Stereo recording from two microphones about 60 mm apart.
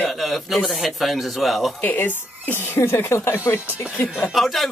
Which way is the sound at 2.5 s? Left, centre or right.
Left.